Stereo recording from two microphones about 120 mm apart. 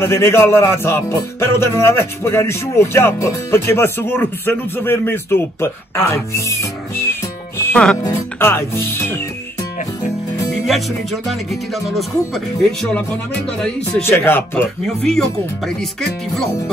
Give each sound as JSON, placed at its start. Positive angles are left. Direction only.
{"t": 0.0, "sound": "speech", "side_deg": 20}
{"t": 10.5, "sound": "speech", "side_deg": 0}
{"t": 14.0, "sound": "speech", "side_deg": 20}
{"t": 15.0, "sound": "speech", "side_deg": 5}